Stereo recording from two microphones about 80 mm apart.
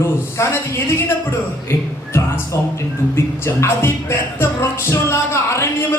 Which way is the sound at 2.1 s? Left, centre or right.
Left.